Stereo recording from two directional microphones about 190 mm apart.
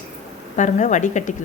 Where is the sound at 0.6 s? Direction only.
40° left (ahead or behind).